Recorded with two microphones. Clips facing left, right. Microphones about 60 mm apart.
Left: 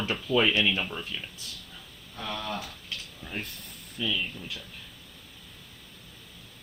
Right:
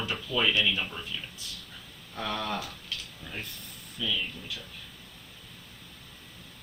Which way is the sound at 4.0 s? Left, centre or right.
Left.